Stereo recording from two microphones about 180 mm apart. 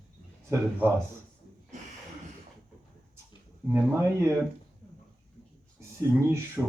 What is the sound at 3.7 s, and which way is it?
Speech, 10° right (ahead or behind).